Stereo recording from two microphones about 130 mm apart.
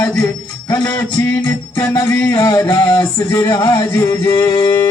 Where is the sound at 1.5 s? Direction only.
20° left (ahead or behind).